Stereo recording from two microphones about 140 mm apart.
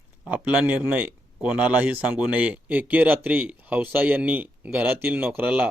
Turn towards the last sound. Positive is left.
turn(degrees=-10)  # may be behind; listen again after turning